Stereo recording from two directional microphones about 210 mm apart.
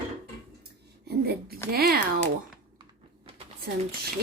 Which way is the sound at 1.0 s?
50° right (ahead or behind).